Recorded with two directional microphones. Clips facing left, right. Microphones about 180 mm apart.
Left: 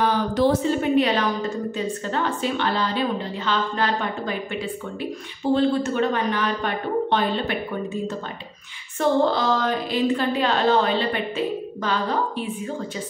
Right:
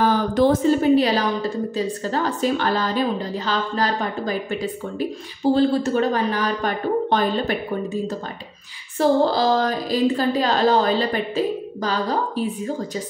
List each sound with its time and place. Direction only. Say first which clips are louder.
0.0 s a woman's voice: right 2 dB; 45° right (ahead or behind)
8.9 s a woman's voice: right 2 dB; 35° right (ahead or behind)